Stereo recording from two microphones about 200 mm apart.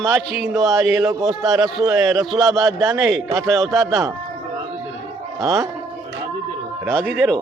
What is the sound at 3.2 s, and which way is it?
Speech, 15° right (ahead or behind).